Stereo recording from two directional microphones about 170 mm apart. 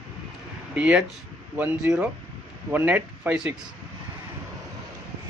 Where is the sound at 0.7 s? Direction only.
5° right (ahead or behind).